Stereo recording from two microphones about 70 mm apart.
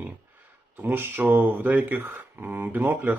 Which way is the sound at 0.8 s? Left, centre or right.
Right.